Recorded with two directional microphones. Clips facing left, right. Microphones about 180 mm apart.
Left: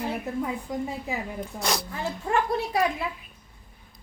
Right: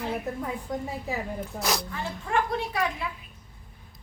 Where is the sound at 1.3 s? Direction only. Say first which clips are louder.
Even; centre (ahead or behind).